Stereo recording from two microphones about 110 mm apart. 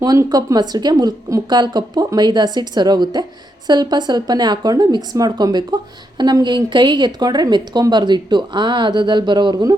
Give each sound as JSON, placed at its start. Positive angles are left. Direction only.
{"t": 0.0, "sound": "a woman's voice", "side_deg": -35}